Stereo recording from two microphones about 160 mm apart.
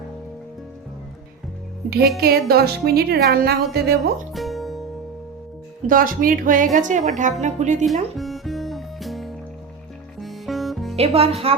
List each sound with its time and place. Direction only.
2.2 s speech: 75° right (ahead or behind)
4.3 s music: centre (ahead or behind)
5.9 s speech: 60° right (ahead or behind)
8.1 s music: centre (ahead or behind)
10.9 s speech: 40° right (ahead or behind)